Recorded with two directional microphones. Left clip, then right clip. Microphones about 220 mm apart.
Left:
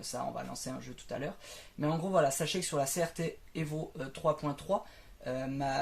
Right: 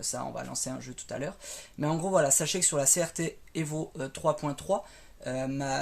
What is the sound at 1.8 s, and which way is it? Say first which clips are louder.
Speech: right 3 dB; 50° right (ahead or behind).